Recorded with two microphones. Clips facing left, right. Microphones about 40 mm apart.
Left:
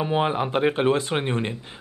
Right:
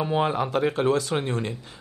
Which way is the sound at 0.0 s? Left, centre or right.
Centre.